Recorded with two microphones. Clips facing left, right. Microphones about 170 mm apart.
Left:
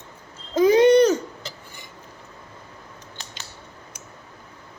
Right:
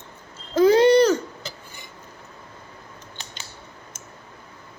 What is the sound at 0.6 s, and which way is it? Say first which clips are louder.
Babbling: even; 20° left (ahead or behind).